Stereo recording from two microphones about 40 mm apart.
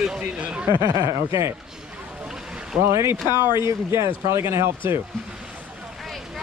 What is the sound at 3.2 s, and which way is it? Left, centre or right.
Speech, right.